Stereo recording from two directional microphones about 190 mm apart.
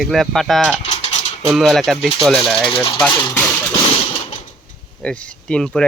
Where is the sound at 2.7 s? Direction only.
25° left (ahead or behind).